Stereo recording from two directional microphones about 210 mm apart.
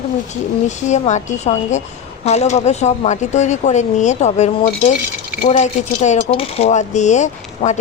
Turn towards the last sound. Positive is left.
turn(degrees=35)  # may be behind; listen again after turning